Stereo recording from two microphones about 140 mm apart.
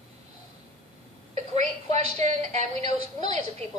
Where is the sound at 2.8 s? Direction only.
35° left (ahead or behind).